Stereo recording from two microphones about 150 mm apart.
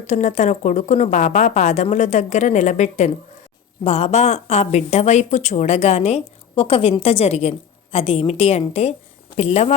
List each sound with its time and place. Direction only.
0.1 s speech: 50° left (ahead or behind)